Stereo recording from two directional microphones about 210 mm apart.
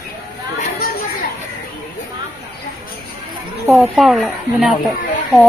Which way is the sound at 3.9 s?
Centre (ahead or behind).